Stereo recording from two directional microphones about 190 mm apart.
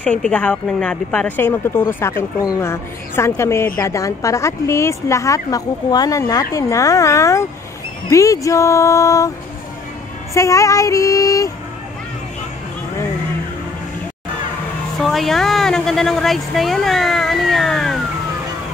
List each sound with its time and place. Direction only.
0.0 s a woman's voice: 5° left (ahead or behind)
10.3 s a woman's voice: 15° left (ahead or behind)
15.0 s speech: centre (ahead or behind)